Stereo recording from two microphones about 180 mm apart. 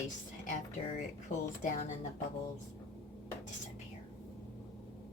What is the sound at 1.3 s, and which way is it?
Speech, 45° left (ahead or behind).